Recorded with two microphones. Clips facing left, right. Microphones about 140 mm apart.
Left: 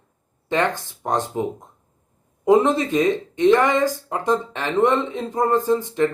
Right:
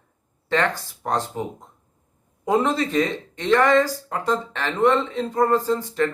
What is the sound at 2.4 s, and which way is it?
Speech, 20° left (ahead or behind).